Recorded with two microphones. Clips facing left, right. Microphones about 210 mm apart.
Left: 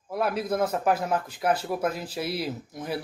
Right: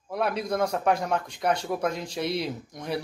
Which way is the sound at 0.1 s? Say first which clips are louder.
Left 1 dB; 5° left (ahead or behind).